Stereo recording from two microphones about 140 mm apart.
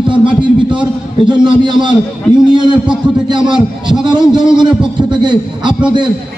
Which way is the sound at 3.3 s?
35° right (ahead or behind).